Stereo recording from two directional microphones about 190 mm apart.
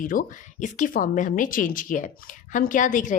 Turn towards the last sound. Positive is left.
turn(degrees=40)  # may be behind; listen again after turning